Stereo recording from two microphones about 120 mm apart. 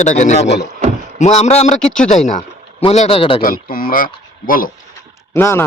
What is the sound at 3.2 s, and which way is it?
Speech, 50° left (ahead or behind).